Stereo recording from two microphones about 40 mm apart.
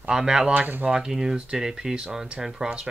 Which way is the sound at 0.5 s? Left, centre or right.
Right.